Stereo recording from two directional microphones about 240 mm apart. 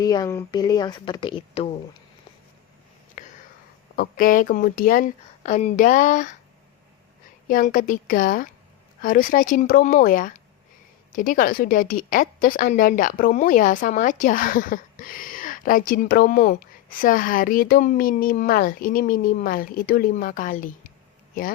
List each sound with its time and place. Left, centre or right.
0.0 s speech: centre
3.9 s a woman's voice: left
7.4 s a woman's voice: left